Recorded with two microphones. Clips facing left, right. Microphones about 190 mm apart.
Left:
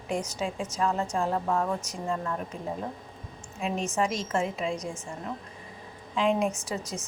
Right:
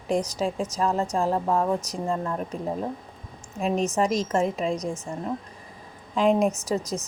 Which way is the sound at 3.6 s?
40° right (ahead or behind).